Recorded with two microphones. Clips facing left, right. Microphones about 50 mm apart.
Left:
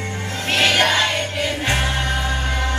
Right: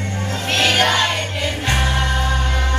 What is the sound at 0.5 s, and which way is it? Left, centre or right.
Music, left.